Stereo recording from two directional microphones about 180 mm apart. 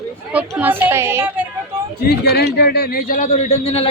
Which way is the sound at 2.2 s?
60° left (ahead or behind).